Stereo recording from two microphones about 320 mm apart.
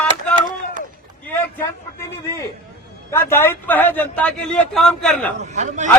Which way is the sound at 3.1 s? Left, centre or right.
Centre.